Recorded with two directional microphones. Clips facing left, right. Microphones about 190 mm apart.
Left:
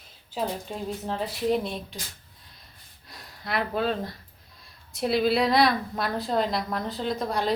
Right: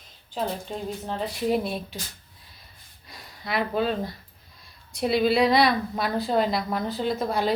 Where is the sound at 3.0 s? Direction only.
Centre (ahead or behind).